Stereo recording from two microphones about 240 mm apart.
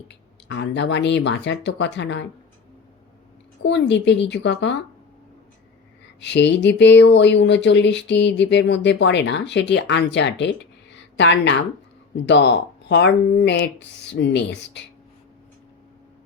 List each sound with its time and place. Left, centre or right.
0.1 s speech: left
3.6 s speech: left
6.1 s speech: left